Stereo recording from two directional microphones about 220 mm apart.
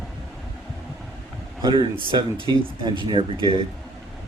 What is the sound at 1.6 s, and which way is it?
Speech, 20° right (ahead or behind).